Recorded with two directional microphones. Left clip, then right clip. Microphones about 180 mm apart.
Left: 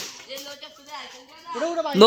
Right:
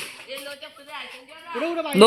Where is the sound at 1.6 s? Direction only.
15° right (ahead or behind).